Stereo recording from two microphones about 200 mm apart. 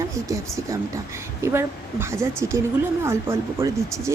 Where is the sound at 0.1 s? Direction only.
15° right (ahead or behind).